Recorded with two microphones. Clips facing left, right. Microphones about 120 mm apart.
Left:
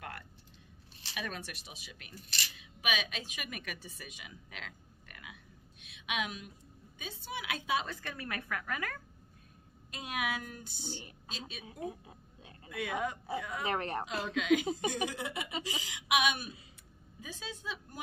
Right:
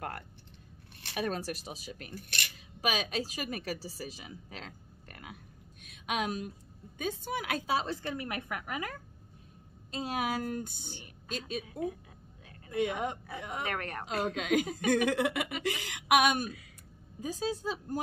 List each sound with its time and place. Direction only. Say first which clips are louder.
1.0 s speech: right 8 dB; 45° right (ahead or behind)
2.1 s a sound: right 1 dB; 60° right (ahead or behind)
2.5 s a woman's voice: right 3 dB; 40° right (ahead or behind); by 8.9 s 20° right (ahead or behind)
9.8 s a woman's voice: right 4 dB; 30° right (ahead or behind); by 11.6 s 50° right (ahead or behind)
13.3 s speech: left 2 dB; 30° left (ahead or behind)
14.0 s a woman's voice: right 3 dB; 40° right (ahead or behind)
14.9 s a sound: right 9 dB; 60° right (ahead or behind)
15.6 s a woman's voice: right 7 dB; 60° right (ahead or behind); by 17.9 s 40° right (ahead or behind)